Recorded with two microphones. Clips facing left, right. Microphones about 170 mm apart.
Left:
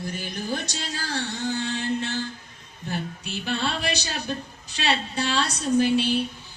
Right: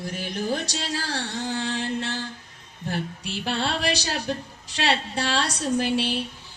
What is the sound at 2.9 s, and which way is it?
A woman's voice, 90° right.